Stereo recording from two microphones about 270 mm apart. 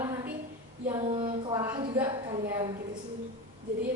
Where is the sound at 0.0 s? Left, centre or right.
Centre.